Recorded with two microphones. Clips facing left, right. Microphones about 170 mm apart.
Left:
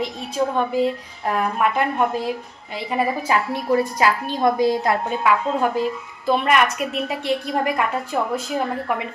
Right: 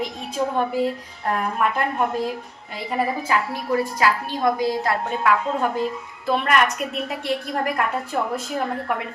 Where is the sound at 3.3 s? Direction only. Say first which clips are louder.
Left 3 dB; 25° left (ahead or behind).